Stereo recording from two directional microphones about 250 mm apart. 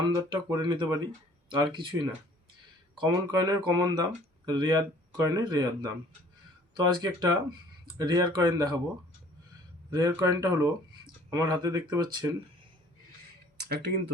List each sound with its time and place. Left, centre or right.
0.0 s speech: centre
9.9 s speech: centre
13.6 s speech: right